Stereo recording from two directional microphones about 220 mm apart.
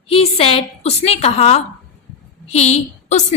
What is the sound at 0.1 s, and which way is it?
A woman's voice, 25° left (ahead or behind).